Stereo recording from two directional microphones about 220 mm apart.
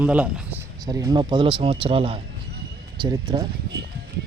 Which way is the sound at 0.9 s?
15° right (ahead or behind).